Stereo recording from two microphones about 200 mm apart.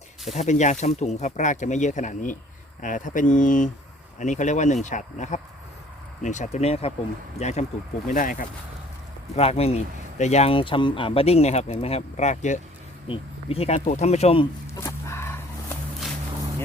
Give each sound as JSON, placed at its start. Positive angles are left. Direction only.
{"t": 0.3, "sound": "speech", "side_deg": 35}
{"t": 9.3, "sound": "speech", "side_deg": 30}
{"t": 14.8, "sound": "a sound", "side_deg": 15}